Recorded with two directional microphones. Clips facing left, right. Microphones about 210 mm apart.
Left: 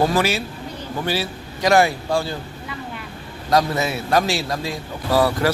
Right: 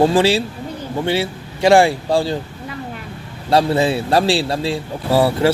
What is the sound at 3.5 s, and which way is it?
Speech, 30° right (ahead or behind).